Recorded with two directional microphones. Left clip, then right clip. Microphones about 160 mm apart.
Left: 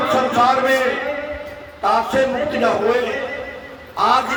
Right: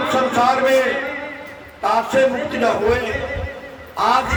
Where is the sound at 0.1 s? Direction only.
25° right (ahead or behind).